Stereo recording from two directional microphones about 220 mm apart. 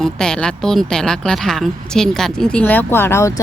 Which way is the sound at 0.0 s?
5° left (ahead or behind).